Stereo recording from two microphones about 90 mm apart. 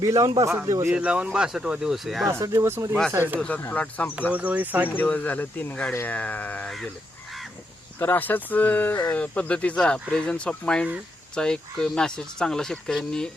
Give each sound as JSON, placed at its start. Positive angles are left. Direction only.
{"t": 0.0, "sound": "a man's voice", "side_deg": -40}
{"t": 0.9, "sound": "speech", "side_deg": -15}
{"t": 2.4, "sound": "a man's voice", "side_deg": -35}
{"t": 3.6, "sound": "speech", "side_deg": 20}
{"t": 4.3, "sound": "speech", "side_deg": -15}
{"t": 4.9, "sound": "speech", "side_deg": 20}
{"t": 7.9, "sound": "speech", "side_deg": 25}